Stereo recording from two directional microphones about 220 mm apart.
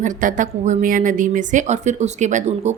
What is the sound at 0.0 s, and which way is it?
A woman's voice, 35° right (ahead or behind).